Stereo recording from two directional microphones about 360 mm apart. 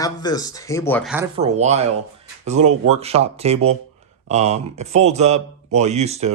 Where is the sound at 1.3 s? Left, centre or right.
Centre.